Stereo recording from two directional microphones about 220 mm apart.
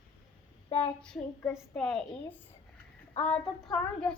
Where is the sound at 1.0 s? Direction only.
10° left (ahead or behind).